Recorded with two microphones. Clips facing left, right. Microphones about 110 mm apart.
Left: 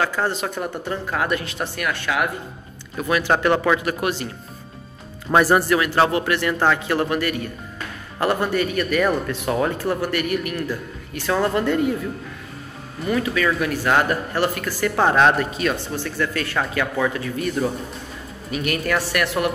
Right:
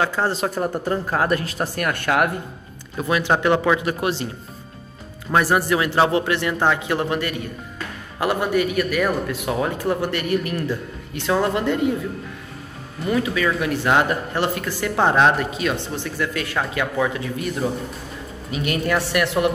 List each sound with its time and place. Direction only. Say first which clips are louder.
0.0 s speech: right 1 dB; 30° right (ahead or behind); by 2.3 s 50° right (ahead or behind)
3.0 s speech: even; 20° right (ahead or behind)
4.0 s speech: right 1 dB; 25° right (ahead or behind)
5.3 s speech: left 2 dB; centre (ahead or behind)
5.7 s speech: even; 20° right (ahead or behind)
8.2 s speech: even; 10° right (ahead or behind)
9.8 s speech: even; 25° right (ahead or behind)
13.1 s speech: even; 20° right (ahead or behind)
18.5 s speech: right 1 dB; 20° right (ahead or behind)